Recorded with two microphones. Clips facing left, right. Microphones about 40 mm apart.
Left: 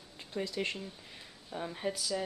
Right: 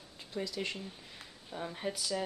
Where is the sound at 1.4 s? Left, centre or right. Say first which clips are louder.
Left 2 dB; centre.